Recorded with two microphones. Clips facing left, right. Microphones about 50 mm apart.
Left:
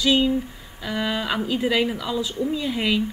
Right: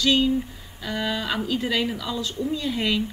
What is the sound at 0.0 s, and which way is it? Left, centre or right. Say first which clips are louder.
Speech: left 1 dB; centre.